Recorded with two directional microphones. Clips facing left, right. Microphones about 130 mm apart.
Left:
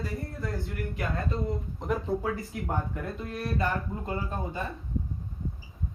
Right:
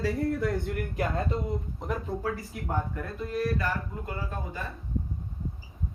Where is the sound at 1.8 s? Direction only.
Centre (ahead or behind).